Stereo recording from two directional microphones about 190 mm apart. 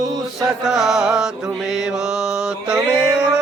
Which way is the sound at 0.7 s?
Centre (ahead or behind).